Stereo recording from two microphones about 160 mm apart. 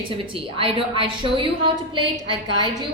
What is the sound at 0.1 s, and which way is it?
A woman's voice, 35° right (ahead or behind).